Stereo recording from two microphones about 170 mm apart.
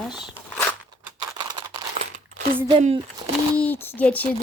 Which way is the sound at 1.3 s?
30° right (ahead or behind).